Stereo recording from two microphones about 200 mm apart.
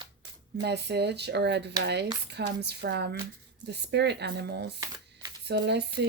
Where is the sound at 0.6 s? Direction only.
55° right (ahead or behind).